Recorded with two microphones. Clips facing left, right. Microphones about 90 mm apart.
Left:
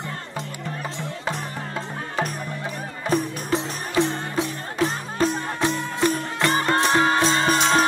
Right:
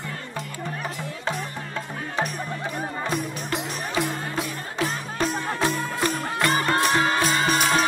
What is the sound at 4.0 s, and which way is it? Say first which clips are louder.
Music: left 6 dB; 25° left (ahead or behind).